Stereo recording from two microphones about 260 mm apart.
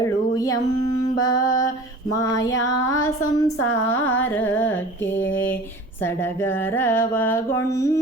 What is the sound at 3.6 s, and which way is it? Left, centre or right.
Female singing, left.